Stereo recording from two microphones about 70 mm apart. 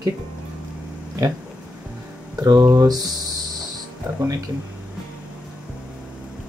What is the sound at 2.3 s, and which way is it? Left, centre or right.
Speech, right.